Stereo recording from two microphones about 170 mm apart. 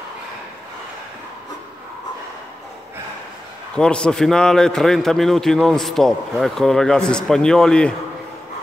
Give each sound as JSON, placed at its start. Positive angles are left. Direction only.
{"t": 3.7, "sound": "a man's voice", "side_deg": 5}